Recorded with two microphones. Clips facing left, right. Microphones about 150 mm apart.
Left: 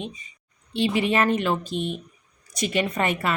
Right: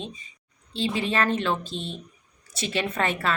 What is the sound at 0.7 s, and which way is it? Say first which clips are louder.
Speech: left 4 dB; 60° left (ahead or behind).